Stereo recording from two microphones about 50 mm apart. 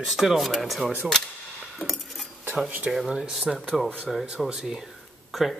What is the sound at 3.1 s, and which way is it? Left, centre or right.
Speech, centre.